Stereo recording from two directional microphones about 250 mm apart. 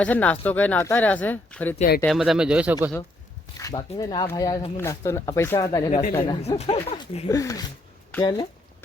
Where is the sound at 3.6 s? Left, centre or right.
Centre.